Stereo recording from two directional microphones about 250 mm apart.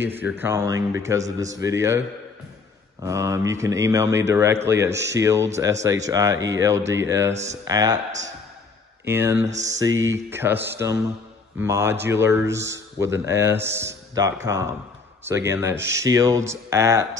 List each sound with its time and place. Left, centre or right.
0.0 s speech: centre
9.0 s speech: centre
9.5 s mantra: right
10.1 s speech: centre